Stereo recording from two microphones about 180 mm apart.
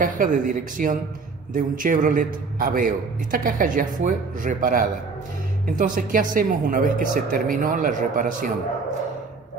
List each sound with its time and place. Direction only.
0.0 s a man's voice: 50° right (ahead or behind)